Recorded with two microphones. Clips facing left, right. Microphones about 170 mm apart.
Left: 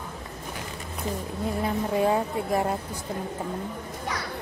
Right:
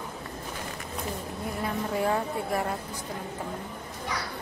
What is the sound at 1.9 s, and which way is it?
Speech, 20° left (ahead or behind).